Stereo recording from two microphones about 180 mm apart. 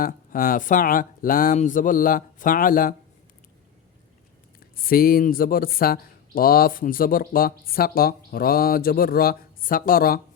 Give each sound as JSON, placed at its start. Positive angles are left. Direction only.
{"t": 0.0, "sound": "speech", "side_deg": 50}
{"t": 4.8, "sound": "speech", "side_deg": 55}